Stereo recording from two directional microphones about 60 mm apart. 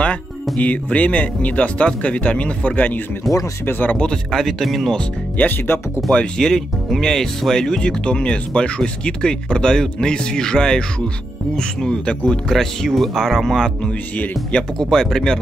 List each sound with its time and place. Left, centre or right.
0.6 s speech: left
3.3 s speech: centre
3.9 s speech: centre
5.4 s speech: left
6.3 s speech: centre
12.5 s speech: centre
13.8 s speech: left
14.8 s speech: centre